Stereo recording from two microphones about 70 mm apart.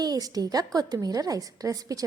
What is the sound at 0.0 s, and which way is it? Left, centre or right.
A woman's voice, right.